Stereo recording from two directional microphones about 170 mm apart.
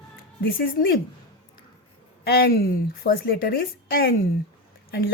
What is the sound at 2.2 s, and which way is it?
A woman's voice, 65° left (ahead or behind).